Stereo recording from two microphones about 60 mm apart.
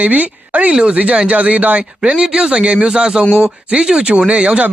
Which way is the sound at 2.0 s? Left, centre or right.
Centre.